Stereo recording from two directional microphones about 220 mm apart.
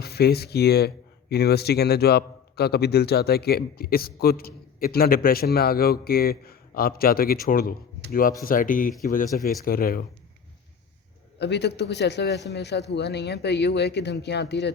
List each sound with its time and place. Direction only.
0.0 s speech: 45° left (ahead or behind)
11.3 s speech: 50° left (ahead or behind)